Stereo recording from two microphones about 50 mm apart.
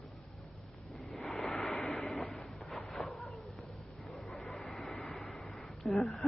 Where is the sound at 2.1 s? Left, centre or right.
Centre.